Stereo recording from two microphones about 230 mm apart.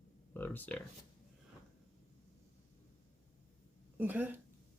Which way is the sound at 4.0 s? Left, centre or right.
Centre.